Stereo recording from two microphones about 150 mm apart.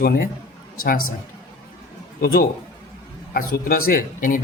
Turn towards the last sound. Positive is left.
turn(degrees=65)  # may be behind; listen again after turning